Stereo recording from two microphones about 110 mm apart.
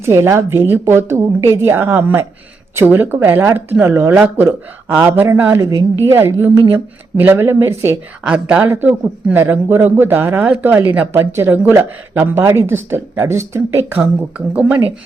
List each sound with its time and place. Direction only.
0.0 s speech: 25° right (ahead or behind)
8.2 s a man's voice: 10° right (ahead or behind)
8.6 s speech: 25° right (ahead or behind)
8.9 s a man's voice: 15° right (ahead or behind)